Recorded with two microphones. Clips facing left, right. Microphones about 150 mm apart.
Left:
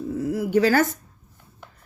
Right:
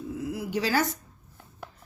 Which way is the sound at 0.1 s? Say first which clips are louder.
Left 9 dB; 45° left (ahead or behind).